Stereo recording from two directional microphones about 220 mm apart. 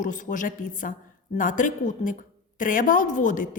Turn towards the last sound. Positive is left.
turn(degrees=35)  # may be behind; listen again after turning